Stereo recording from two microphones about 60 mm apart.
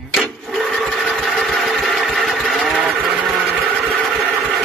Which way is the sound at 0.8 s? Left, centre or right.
Centre.